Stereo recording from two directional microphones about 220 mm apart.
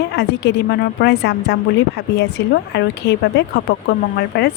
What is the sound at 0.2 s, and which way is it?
A woman's voice, 50° left (ahead or behind).